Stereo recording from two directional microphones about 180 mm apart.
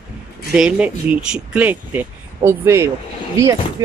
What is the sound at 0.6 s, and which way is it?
Speech, 5° right (ahead or behind).